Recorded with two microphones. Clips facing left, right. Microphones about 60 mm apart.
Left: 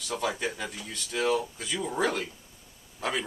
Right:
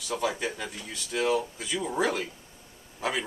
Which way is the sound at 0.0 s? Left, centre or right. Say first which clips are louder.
Right 1 dB; centre.